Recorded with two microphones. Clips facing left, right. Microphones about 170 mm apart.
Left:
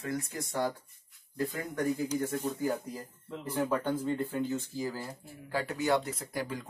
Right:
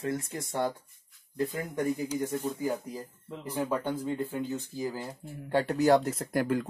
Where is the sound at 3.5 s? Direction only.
10° right (ahead or behind).